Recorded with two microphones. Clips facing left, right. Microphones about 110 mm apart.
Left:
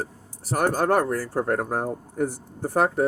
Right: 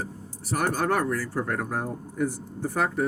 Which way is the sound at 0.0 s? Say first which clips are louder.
Left 2 dB; 45° left (ahead or behind).